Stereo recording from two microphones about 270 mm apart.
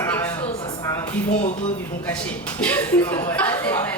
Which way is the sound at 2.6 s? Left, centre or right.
Centre.